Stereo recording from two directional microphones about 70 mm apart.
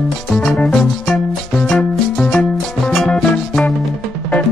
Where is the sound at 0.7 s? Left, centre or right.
Centre.